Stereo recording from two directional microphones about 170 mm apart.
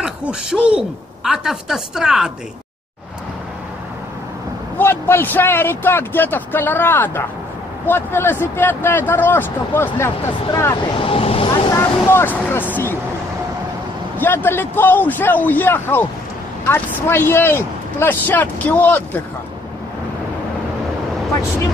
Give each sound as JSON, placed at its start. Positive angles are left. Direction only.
{"t": 0.0, "sound": "speech", "side_deg": -5}
{"t": 4.7, "sound": "speech", "side_deg": 15}
{"t": 11.0, "sound": "speech", "side_deg": 35}
{"t": 11.7, "sound": "speech", "side_deg": 15}
{"t": 14.1, "sound": "speech", "side_deg": 10}